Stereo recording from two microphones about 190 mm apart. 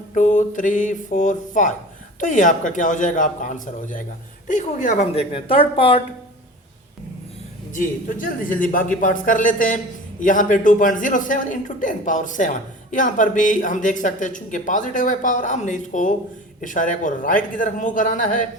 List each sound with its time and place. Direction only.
0.1 s speech: 40° left (ahead or behind)
7.8 s a man's voice: 45° left (ahead or behind)